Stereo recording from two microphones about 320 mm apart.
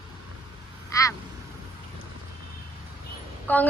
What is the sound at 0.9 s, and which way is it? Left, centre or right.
Vehicle, centre.